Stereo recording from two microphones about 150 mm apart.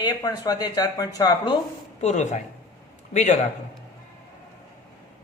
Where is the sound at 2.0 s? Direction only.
50° left (ahead or behind).